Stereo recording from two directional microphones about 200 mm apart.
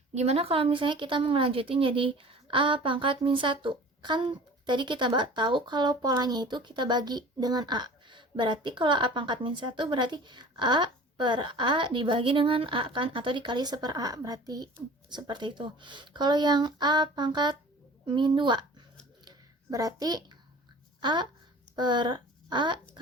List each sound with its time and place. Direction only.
0.1 s speech: 30° right (ahead or behind)
19.2 s a sound: 20° right (ahead or behind)
21.0 s speech: 25° right (ahead or behind)